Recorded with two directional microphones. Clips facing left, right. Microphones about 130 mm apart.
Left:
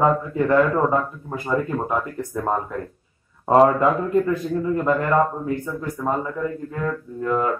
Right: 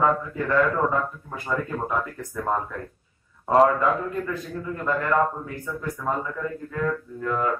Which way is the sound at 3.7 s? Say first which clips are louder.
Left 5 dB; 20° left (ahead or behind).